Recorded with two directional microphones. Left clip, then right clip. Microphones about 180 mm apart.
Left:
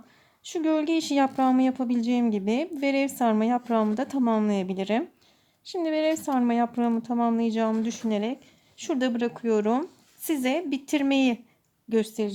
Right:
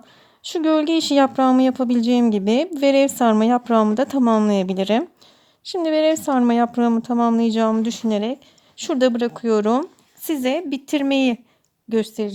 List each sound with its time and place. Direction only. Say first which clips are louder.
0.4 s speech: right 7 dB; 40° right (ahead or behind)